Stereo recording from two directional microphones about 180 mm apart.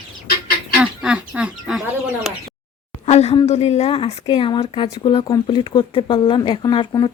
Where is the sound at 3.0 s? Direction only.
35° left (ahead or behind).